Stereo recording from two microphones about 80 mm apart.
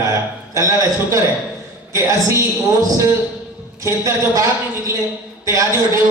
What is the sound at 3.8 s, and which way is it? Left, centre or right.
A woman's voice, right.